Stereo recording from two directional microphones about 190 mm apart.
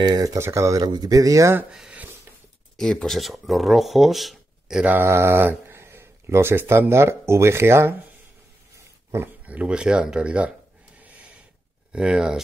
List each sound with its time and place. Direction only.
0.0 s speech: 20° right (ahead or behind)
11.9 s speech: 5° right (ahead or behind)